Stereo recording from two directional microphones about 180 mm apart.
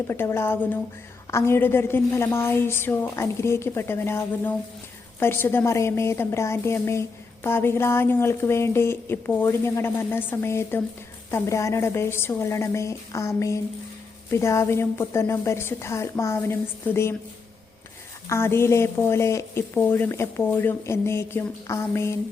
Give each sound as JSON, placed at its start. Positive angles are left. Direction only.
{"t": 0.1, "sound": "a woman's voice", "side_deg": 15}
{"t": 18.3, "sound": "a woman's voice", "side_deg": 15}